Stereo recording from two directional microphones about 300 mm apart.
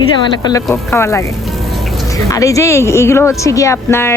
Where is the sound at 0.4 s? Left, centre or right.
Centre.